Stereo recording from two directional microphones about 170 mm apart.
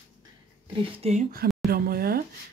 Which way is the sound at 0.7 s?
35° right (ahead or behind).